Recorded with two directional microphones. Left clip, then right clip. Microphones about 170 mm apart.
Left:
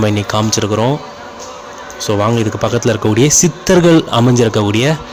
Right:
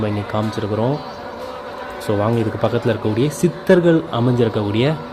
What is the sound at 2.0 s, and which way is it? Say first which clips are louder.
Speech: left 5 dB; 15° left (ahead or behind).